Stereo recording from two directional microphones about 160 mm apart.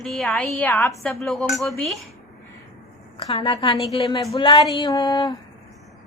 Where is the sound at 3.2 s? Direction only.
30° left (ahead or behind).